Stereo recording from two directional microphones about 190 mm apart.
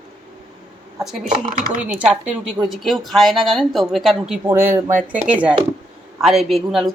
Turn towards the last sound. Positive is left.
turn(degrees=0)  # may be behind; listen again after turning